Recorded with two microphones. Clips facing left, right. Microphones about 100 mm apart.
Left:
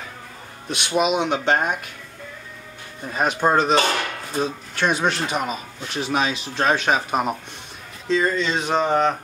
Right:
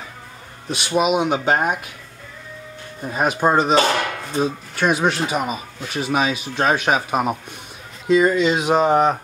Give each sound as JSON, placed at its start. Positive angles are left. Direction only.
{"t": 0.7, "sound": "speech", "side_deg": 0}
{"t": 3.1, "sound": "speech", "side_deg": -5}